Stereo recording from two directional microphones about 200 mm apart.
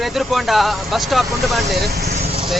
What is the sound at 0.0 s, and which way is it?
Speech, centre (ahead or behind).